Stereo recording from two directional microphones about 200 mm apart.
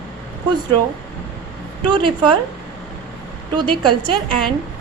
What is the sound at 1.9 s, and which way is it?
Speech, 25° right (ahead or behind).